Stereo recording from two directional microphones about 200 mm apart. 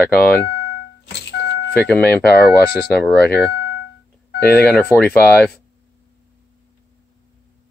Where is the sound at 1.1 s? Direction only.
60° left (ahead or behind).